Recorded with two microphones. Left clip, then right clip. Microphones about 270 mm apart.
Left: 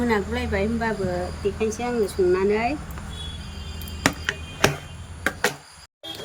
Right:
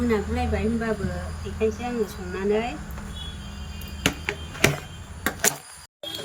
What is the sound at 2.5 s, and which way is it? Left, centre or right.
Speech, centre.